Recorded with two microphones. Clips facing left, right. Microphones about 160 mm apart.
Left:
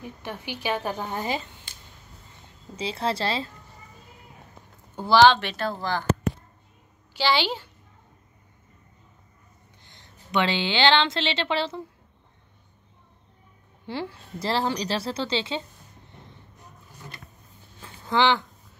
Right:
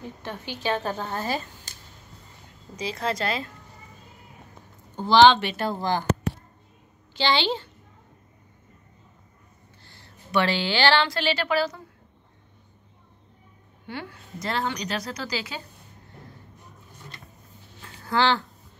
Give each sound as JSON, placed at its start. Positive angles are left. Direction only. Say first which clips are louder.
{"t": 0.0, "sound": "a woman's voice", "louder": "even", "side_deg": 15}
{"t": 2.7, "sound": "a woman's voice", "louder": "left 1 dB", "side_deg": 30}
{"t": 4.9, "sound": "speech", "louder": "right 1 dB", "side_deg": 5}
{"t": 5.7, "sound": "speech", "louder": "right 3 dB", "side_deg": -15}
{"t": 7.2, "sound": "a woman's voice", "louder": "even", "side_deg": 10}
{"t": 9.8, "sound": "a woman's voice", "louder": "right 1 dB", "side_deg": 20}
{"t": 13.8, "sound": "a woman's voice", "louder": "left 4 dB", "side_deg": 30}
{"t": 18.0, "sound": "speech", "louder": "left 1 dB", "side_deg": 20}